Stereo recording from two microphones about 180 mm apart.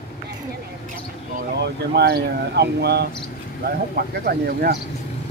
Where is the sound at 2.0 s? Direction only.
65° right (ahead or behind).